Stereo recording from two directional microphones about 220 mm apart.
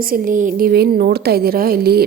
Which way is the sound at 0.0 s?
40° right (ahead or behind).